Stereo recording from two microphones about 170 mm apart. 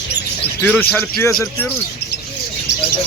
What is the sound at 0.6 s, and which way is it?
A man's voice, 10° left (ahead or behind).